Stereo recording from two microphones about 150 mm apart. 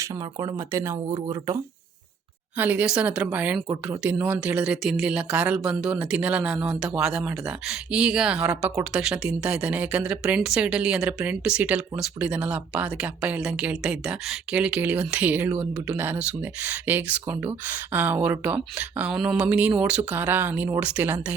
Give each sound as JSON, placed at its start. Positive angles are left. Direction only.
{"t": 0.0, "sound": "speech", "side_deg": -20}
{"t": 2.6, "sound": "speech", "side_deg": -10}